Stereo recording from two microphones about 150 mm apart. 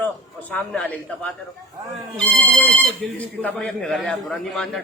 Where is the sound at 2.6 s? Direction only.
10° left (ahead or behind).